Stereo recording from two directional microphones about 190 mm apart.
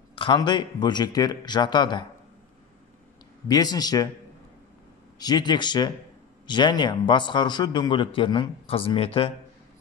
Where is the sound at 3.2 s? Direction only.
20° left (ahead or behind).